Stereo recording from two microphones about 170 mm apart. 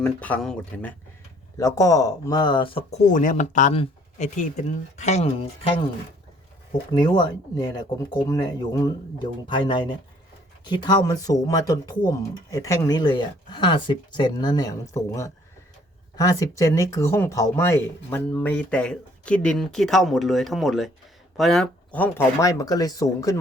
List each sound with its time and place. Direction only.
0.0 s speech: 10° left (ahead or behind)
1.5 s speech: 15° left (ahead or behind)
3.1 s speech: 50° left (ahead or behind)
6.9 s speech: 25° left (ahead or behind)